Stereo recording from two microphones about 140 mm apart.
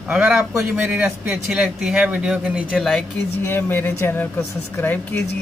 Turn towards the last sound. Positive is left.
turn(degrees=15)  # may be behind; listen again after turning